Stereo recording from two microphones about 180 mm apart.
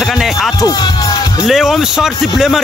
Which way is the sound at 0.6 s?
20° left (ahead or behind).